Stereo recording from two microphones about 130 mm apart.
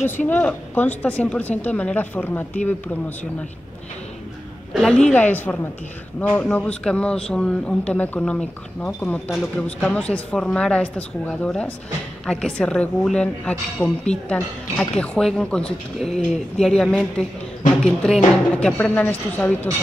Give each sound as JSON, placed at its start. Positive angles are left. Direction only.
{"t": 0.3, "sound": "speech", "side_deg": 15}
{"t": 4.7, "sound": "speech", "side_deg": 5}
{"t": 15.0, "sound": "speech", "side_deg": 5}